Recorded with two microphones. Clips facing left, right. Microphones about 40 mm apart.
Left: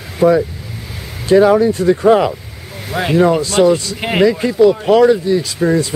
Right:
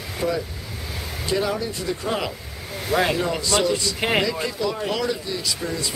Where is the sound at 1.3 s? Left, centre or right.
Left.